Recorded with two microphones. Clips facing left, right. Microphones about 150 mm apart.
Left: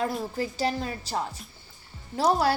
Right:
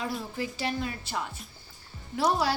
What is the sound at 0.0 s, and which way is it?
A woman's voice, 45° left (ahead or behind).